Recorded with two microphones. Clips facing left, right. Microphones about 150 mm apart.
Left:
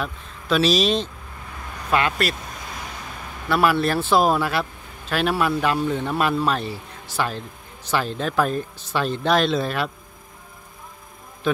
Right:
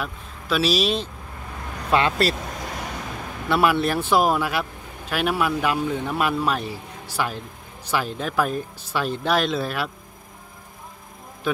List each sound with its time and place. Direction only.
0.0 s a man's voice: 5° right (ahead or behind)
1.9 s speech: 25° right (ahead or behind)
3.4 s a man's voice: 20° right (ahead or behind)
11.4 s a man's voice: 5° right (ahead or behind)